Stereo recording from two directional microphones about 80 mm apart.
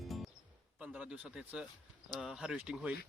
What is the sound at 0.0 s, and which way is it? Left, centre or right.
Music, centre.